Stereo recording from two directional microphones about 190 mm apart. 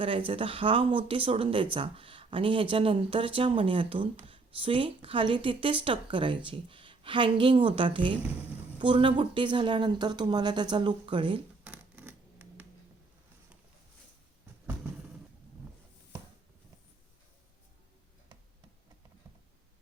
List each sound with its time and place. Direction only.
0.0 s speech: 30° right (ahead or behind)
8.2 s a woman's voice: 10° right (ahead or behind)
8.8 s speech: 25° right (ahead or behind)
11.6 s a sound: 5° right (ahead or behind)